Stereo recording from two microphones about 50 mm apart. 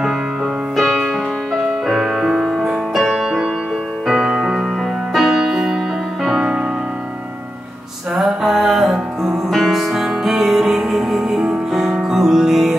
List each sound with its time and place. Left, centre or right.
0.7 s music: centre
8.2 s music: centre